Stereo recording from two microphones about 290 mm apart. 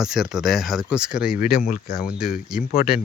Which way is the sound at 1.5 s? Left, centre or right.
Left.